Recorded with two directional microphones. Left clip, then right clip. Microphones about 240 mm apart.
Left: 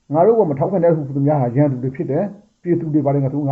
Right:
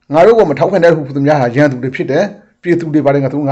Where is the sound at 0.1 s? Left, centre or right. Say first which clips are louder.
Right 7 dB; right.